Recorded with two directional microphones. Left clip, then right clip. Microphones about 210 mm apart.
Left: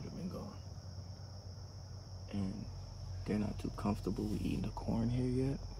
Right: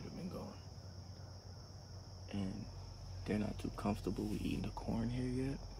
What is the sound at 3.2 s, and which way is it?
Speech, 5° left (ahead or behind).